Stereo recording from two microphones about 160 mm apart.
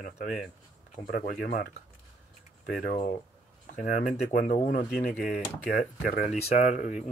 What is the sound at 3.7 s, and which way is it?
Speech, 60° left (ahead or behind).